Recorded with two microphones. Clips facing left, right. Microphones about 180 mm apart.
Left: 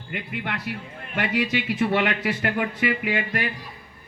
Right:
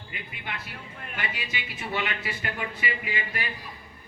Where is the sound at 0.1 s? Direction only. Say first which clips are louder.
Left 9 dB; 70° left (ahead or behind).